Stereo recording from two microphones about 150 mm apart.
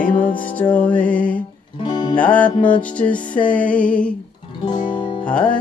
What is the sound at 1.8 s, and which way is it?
Music, 30° left (ahead or behind).